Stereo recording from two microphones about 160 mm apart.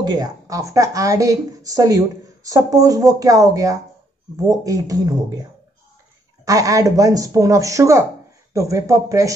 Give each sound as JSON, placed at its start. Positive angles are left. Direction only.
{"t": 0.0, "sound": "a woman's voice", "side_deg": -25}